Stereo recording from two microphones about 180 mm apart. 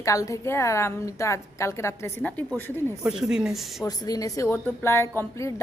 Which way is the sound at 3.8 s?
20° left (ahead or behind).